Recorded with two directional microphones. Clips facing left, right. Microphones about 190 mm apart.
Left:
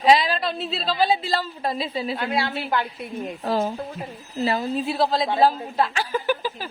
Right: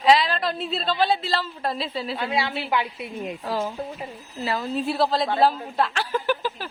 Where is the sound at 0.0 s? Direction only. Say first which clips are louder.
Left 1 dB; 15° left (ahead or behind).